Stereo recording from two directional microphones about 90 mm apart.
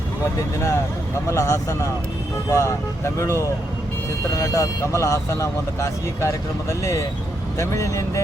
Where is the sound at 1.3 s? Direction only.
35° left (ahead or behind).